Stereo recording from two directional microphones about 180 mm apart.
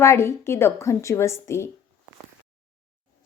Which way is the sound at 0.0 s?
15° left (ahead or behind).